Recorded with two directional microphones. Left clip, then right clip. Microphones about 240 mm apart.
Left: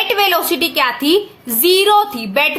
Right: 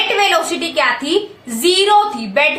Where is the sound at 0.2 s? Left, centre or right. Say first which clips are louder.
Even; left.